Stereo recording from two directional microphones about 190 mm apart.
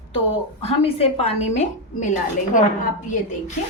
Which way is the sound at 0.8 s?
30° left (ahead or behind).